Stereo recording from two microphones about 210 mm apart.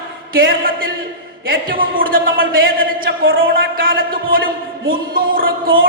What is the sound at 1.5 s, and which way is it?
Speech, 45° right (ahead or behind).